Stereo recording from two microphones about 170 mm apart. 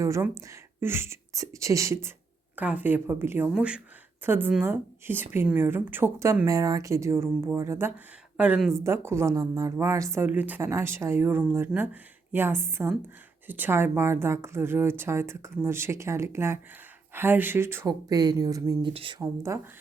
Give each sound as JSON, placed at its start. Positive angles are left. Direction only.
{"t": 0.0, "sound": "a woman's voice", "side_deg": -20}
{"t": 8.8, "sound": "a woman's voice", "side_deg": -15}